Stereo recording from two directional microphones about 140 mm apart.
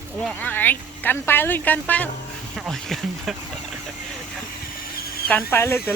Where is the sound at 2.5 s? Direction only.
Centre (ahead or behind).